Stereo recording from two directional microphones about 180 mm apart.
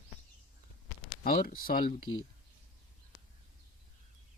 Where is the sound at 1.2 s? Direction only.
55° left (ahead or behind).